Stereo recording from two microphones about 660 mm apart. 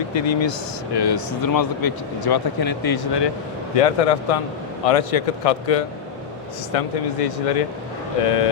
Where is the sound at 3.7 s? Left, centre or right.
Left.